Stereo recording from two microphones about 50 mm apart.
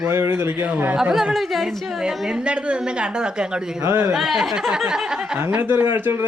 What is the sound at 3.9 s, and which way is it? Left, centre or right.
Speech, right.